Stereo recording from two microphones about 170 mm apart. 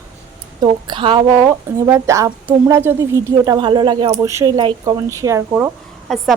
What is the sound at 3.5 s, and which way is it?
A woman's voice, 30° right (ahead or behind).